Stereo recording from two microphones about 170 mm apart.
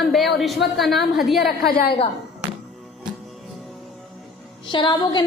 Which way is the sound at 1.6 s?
65° left (ahead or behind).